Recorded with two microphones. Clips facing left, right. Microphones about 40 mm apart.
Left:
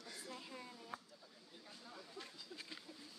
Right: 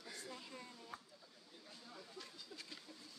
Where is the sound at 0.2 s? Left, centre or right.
Centre.